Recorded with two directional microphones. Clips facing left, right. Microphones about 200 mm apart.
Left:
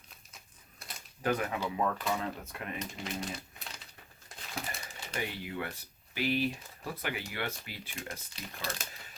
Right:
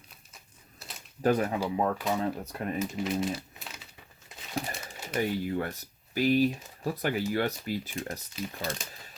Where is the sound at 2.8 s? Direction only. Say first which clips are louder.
Right 10 dB; 5° right (ahead or behind).